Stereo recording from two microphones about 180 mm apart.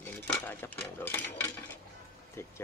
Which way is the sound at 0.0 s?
10° left (ahead or behind).